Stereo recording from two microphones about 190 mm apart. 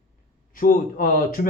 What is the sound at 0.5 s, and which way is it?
Speech, 45° left (ahead or behind).